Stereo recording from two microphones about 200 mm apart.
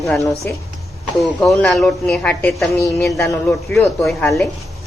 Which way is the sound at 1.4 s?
Centre (ahead or behind).